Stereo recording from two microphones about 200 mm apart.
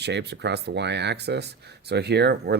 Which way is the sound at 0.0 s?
60° right (ahead or behind).